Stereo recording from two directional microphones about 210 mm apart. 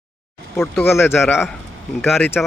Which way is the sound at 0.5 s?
10° left (ahead or behind).